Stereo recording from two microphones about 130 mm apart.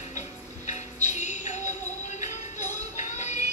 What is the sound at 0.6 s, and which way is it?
Music, 65° left (ahead or behind).